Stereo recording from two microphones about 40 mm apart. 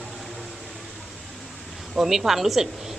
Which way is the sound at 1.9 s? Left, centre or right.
Centre.